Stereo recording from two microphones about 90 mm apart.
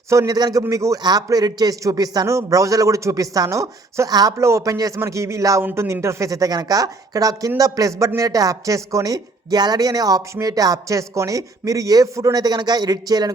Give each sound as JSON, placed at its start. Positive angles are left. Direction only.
{"t": 0.1, "sound": "a woman's voice", "side_deg": -35}
{"t": 0.3, "sound": "a man's voice", "side_deg": -45}
{"t": 0.7, "sound": "a woman's voice", "side_deg": -35}
{"t": 1.0, "sound": "a woman's voice", "side_deg": -45}